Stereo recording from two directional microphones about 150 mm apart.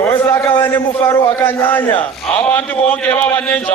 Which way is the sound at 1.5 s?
15° left (ahead or behind).